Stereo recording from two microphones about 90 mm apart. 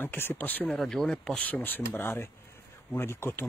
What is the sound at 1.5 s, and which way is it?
Speech, 20° left (ahead or behind).